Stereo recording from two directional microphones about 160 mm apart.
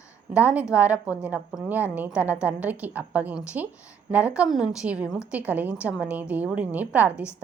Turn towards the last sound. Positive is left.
turn(degrees=-10)  # may be behind; listen again after turning